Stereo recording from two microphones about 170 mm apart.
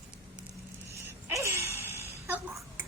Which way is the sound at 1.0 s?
15° right (ahead or behind).